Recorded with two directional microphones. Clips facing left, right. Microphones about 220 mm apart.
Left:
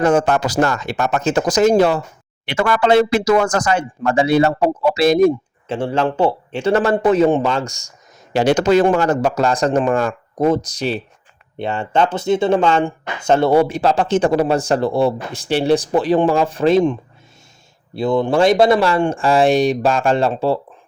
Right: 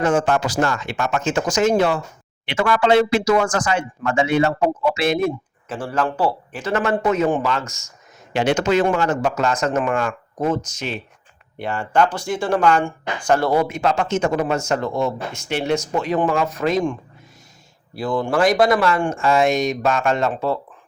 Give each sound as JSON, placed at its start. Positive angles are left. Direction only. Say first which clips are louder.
{"t": 0.0, "sound": "speech", "louder": "left 3 dB", "side_deg": 40}
{"t": 11.6, "sound": "speech", "louder": "left 1 dB", "side_deg": 25}